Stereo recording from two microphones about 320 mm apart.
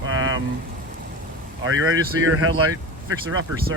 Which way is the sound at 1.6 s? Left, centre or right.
Right.